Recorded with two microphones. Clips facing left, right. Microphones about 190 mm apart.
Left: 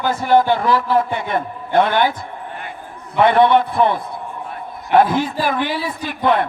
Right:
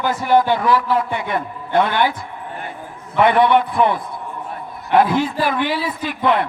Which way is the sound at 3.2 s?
25° left (ahead or behind).